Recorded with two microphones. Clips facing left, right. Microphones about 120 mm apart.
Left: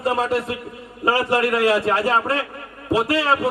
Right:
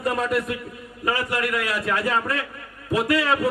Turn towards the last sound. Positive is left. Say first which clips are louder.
# left 2 dB
turn(degrees=30)  # may be behind; listen again after turning